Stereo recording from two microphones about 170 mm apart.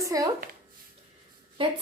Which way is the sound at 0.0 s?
20° right (ahead or behind).